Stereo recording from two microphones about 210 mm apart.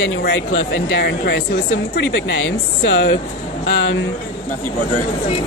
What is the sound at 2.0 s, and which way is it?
Speech, 60° left (ahead or behind).